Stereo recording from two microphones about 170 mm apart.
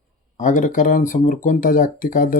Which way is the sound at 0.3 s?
50° left (ahead or behind).